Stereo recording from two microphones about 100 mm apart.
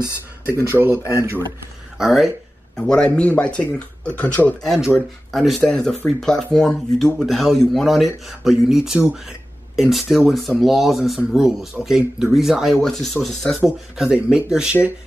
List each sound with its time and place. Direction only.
0.0 s speech: 25° left (ahead or behind)
2.0 s speech: centre (ahead or behind); by 4.3 s 15° left (ahead or behind)
4.7 s speech: 5° right (ahead or behind)
13.9 s speech: 10° right (ahead or behind)